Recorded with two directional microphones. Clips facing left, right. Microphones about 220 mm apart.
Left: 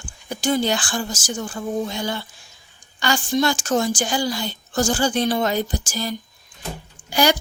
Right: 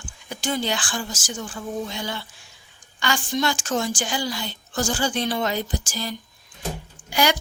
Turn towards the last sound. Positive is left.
turn(degrees=35)  # may be behind; listen again after turning